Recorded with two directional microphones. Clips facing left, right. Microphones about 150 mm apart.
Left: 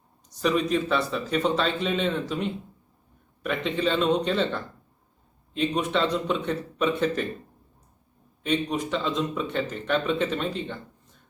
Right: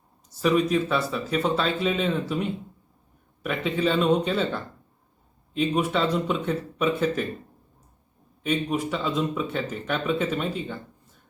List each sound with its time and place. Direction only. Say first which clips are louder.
0.3 s speech: right 2 dB; 5° right (ahead or behind)
8.4 s speech: right 1 dB; 5° right (ahead or behind)